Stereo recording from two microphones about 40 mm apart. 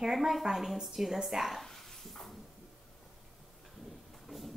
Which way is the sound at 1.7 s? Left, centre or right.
Centre.